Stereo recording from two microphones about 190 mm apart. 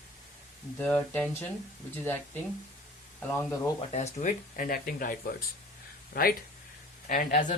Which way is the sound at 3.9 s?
40° left (ahead or behind).